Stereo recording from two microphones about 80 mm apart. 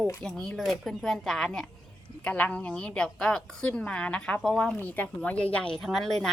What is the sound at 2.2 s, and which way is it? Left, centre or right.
A woman's voice, centre.